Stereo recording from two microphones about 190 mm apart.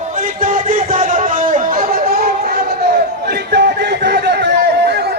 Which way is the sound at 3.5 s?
60° right (ahead or behind).